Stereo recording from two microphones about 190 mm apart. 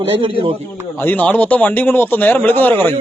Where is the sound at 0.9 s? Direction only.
10° left (ahead or behind).